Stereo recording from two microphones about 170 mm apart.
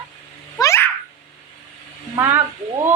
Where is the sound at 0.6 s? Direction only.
15° left (ahead or behind).